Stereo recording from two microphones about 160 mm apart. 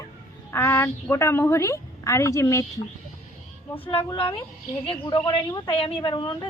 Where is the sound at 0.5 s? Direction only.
15° left (ahead or behind).